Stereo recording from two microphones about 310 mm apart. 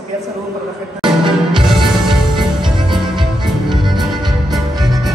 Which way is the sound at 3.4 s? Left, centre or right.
Centre.